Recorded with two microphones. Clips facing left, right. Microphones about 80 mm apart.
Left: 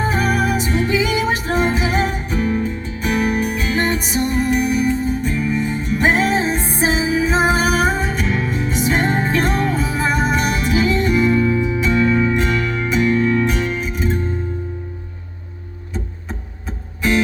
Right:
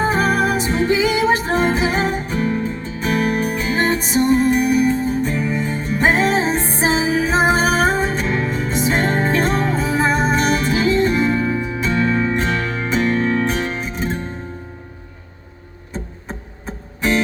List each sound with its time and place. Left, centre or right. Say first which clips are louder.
0.0 s music: right 2 dB; right
9.0 s music: even; centre
9.2 s music: right 1 dB; right